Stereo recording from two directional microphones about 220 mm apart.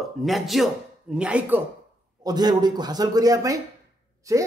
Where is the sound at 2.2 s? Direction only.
20° right (ahead or behind).